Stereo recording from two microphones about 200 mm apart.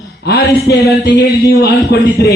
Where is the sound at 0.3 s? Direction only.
50° left (ahead or behind).